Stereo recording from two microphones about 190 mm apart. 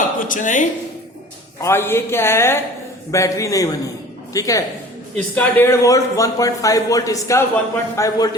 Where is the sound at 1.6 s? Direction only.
10° left (ahead or behind).